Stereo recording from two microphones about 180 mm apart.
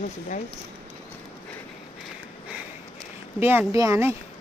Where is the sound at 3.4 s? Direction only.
15° right (ahead or behind).